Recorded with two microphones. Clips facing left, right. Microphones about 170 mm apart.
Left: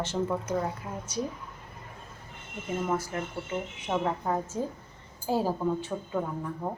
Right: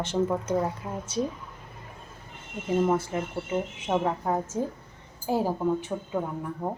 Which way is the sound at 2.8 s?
20° right (ahead or behind).